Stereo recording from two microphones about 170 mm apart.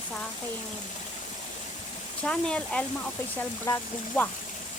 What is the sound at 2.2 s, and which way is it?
Speech, 5° left (ahead or behind).